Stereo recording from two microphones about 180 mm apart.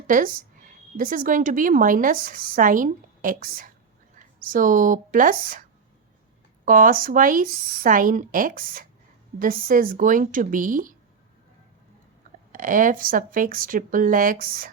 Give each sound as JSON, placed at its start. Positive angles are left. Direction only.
{"t": 0.1, "sound": "speech", "side_deg": -50}
{"t": 6.7, "sound": "speech", "side_deg": -50}
{"t": 12.5, "sound": "speech", "side_deg": -50}